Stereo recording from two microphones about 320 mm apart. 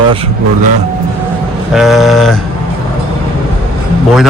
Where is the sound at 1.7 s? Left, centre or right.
Centre.